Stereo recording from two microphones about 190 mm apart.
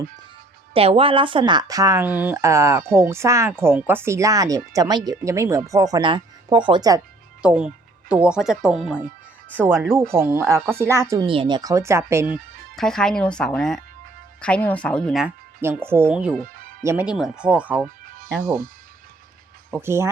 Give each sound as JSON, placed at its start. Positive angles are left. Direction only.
{"t": 0.7, "sound": "speech", "side_deg": -30}
{"t": 7.4, "sound": "speech", "side_deg": -5}
{"t": 11.3, "sound": "speech", "side_deg": -25}
{"t": 12.7, "sound": "speech", "side_deg": 5}
{"t": 15.6, "sound": "speech", "side_deg": -10}
{"t": 19.7, "sound": "speech", "side_deg": -15}